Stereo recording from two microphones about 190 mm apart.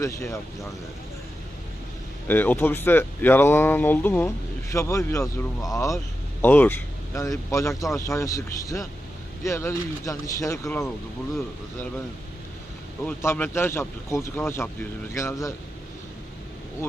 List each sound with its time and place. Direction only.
0.0 s speech: 15° left (ahead or behind)
2.2 s speech: 10° left (ahead or behind)
13.1 s speech: 10° left (ahead or behind)